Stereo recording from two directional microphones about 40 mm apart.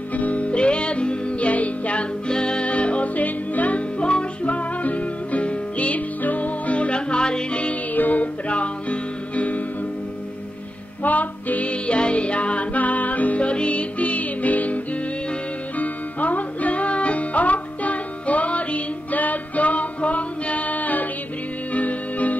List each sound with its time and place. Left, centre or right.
0.1 s music: left
2.2 s music: left
4.0 s music: left
7.9 s music: left
11.0 s music: left
13.4 s music: left
15.8 s music: left